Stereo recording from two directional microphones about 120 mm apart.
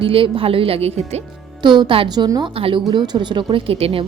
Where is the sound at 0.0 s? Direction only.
50° right (ahead or behind).